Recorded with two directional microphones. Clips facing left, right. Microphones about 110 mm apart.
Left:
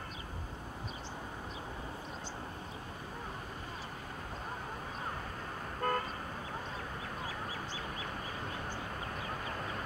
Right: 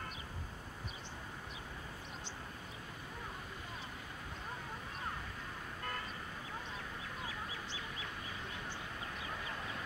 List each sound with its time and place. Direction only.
5.8 s vehicle: 50° left (ahead or behind)
7.2 s duck: 40° left (ahead or behind)
9.1 s vehicle: 45° left (ahead or behind)